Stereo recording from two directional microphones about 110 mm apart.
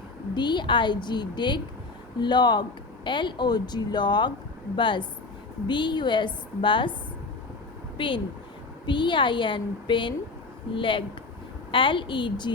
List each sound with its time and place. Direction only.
0.3 s speech: 45° left (ahead or behind)
7.9 s speech: 50° left (ahead or behind)